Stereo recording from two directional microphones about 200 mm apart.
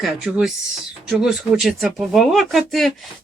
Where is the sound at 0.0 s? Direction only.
5° right (ahead or behind).